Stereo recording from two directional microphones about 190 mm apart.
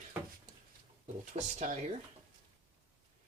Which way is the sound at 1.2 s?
35° right (ahead or behind).